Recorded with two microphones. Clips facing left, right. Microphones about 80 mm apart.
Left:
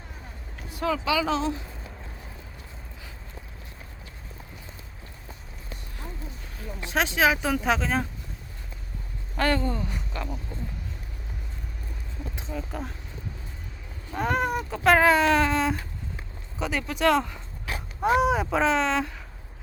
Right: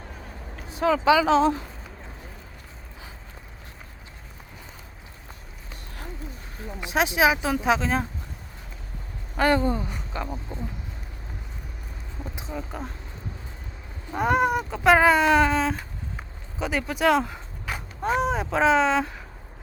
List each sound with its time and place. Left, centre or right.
1.0 s speech: right
6.8 s speech: centre
9.4 s speech: centre
10.2 s speech: right
12.4 s speech: centre
14.1 s speech: centre
18.0 s speech: centre